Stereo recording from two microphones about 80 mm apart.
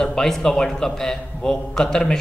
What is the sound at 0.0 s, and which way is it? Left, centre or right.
A man's voice, centre.